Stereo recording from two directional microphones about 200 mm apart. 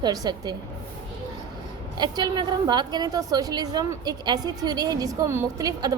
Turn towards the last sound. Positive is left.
turn(degrees=-20)  # may be behind; listen again after turning